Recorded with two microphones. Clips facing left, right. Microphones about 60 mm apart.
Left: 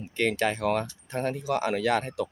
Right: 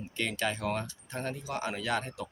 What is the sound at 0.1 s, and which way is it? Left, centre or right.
Speech, left.